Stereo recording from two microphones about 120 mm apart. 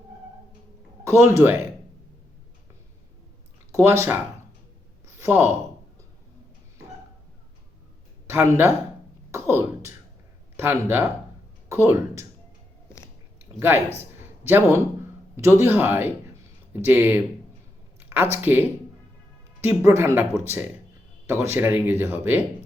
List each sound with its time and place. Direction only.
1.0 s speech: 25° right (ahead or behind)
3.7 s speech: 25° right (ahead or behind)
5.2 s speech: 20° right (ahead or behind)
8.3 s speech: 20° right (ahead or behind)
13.6 s speech: 20° right (ahead or behind)
14.0 s a sound: 20° right (ahead or behind)
15.4 s speech: 20° right (ahead or behind)